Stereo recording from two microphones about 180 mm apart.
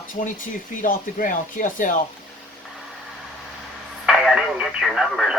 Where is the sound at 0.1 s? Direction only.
50° left (ahead or behind).